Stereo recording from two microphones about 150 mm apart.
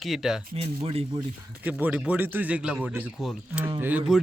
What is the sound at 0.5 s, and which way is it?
Speech, 40° right (ahead or behind).